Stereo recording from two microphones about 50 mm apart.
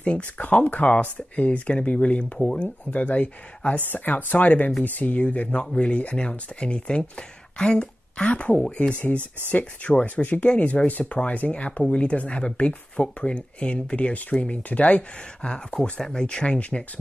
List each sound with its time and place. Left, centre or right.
0.0 s speech: left
2.3 s speech: centre
2.6 s speech: left
16.0 s speech: centre
16.3 s speech: left